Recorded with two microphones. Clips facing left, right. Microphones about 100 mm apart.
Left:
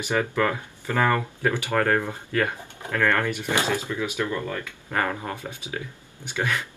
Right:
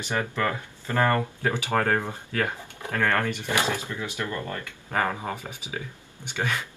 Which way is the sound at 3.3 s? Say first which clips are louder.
Left 2 dB; 20° left (ahead or behind).